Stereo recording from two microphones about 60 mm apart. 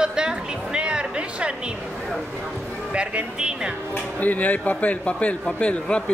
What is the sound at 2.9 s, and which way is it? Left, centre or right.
Speech, centre.